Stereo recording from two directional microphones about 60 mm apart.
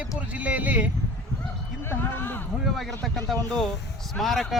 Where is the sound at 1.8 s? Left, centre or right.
Left.